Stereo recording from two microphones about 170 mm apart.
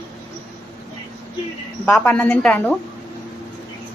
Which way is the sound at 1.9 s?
10° left (ahead or behind).